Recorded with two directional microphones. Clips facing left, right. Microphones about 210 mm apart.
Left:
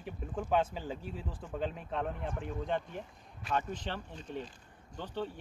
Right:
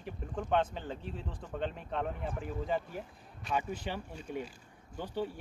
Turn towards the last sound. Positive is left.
turn(degrees=-10)  # may be behind; listen again after turning